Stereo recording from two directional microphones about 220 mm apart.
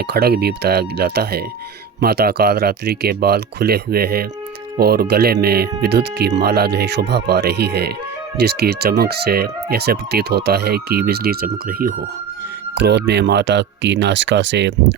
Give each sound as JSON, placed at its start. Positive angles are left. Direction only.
{"t": 0.0, "sound": "speech", "side_deg": -45}